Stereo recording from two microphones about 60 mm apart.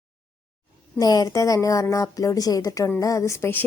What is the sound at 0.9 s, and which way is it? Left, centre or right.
Speech, left.